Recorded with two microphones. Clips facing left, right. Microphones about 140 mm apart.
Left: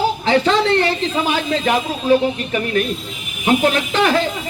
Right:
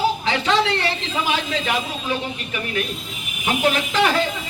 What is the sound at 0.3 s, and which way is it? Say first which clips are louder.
Speech: left 5 dB; 40° left (ahead or behind).